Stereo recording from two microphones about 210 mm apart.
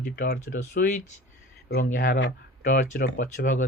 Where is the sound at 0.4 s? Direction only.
65° left (ahead or behind).